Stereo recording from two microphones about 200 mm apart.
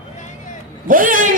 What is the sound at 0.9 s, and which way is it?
Speech, 45° right (ahead or behind).